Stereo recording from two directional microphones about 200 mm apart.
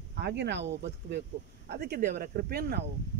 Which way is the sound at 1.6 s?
50° right (ahead or behind).